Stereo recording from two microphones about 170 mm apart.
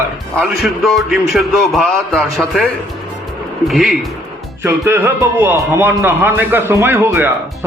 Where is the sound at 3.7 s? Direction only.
Centre (ahead or behind).